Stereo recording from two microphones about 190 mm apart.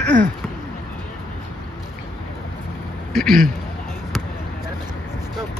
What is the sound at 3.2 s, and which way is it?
Speech, centre (ahead or behind).